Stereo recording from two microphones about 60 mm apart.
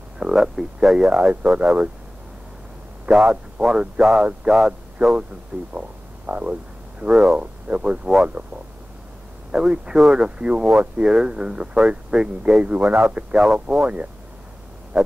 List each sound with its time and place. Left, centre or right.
0.2 s speech: centre
3.1 s a man's voice: centre
9.5 s speech: centre